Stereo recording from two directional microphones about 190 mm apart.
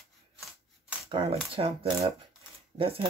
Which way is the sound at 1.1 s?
30° right (ahead or behind).